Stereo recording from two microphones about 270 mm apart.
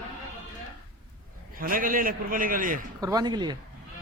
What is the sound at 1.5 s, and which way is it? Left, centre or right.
A man's voice, right.